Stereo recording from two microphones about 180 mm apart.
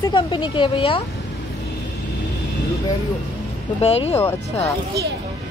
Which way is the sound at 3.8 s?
35° left (ahead or behind).